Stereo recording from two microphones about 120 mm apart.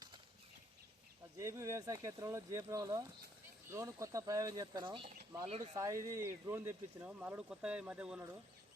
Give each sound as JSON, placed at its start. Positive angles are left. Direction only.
{"t": 1.4, "sound": "speech", "side_deg": -25}
{"t": 5.5, "sound": "speech", "side_deg": -70}
{"t": 5.7, "sound": "speech", "side_deg": -25}